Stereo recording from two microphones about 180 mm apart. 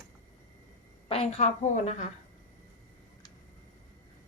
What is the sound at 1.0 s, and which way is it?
A woman's voice, 35° left (ahead or behind).